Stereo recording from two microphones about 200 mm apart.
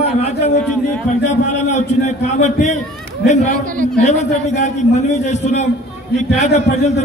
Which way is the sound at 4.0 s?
35° left (ahead or behind).